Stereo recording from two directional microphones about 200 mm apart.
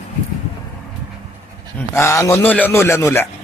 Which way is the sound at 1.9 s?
15° left (ahead or behind).